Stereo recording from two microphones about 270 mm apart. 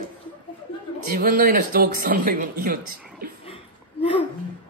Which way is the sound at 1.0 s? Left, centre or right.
Right.